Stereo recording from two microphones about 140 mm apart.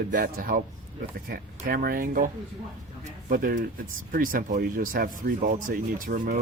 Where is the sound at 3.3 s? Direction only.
85° right.